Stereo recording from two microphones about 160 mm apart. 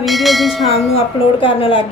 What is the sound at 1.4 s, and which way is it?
Speech, 35° left (ahead or behind).